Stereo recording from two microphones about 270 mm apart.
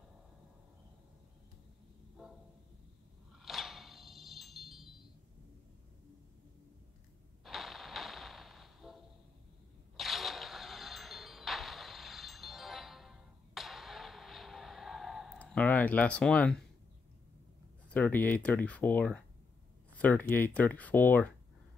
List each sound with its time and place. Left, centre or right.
3.4 s a sound: centre
7.4 s music: centre
17.8 s speech: centre